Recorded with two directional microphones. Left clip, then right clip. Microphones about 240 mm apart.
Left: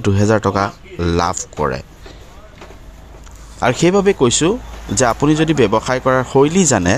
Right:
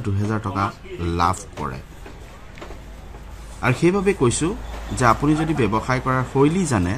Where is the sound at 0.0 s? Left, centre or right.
Left.